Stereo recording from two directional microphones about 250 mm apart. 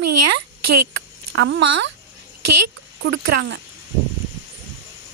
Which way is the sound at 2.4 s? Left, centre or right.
Right.